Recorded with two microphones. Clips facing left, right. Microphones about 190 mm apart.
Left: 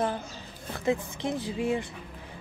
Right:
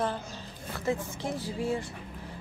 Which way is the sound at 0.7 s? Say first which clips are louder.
Left 3 dB; 20° left (ahead or behind).